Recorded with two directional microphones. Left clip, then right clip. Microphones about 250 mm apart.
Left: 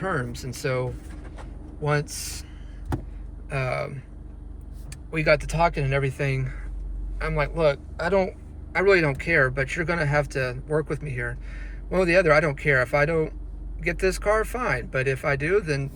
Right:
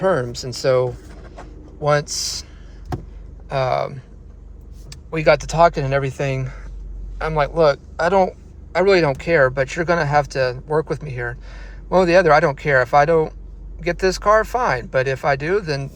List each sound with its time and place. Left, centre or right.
0.0 s speech: right
3.5 s speech: centre